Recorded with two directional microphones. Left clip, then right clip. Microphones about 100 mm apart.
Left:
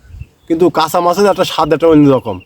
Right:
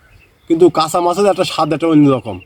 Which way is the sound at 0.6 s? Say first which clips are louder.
Left 2 dB; 25° left (ahead or behind).